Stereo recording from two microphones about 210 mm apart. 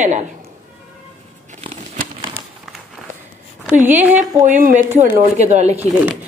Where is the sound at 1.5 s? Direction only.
30° right (ahead or behind).